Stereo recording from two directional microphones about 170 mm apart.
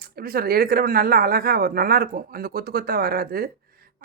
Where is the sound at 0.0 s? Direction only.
60° right (ahead or behind).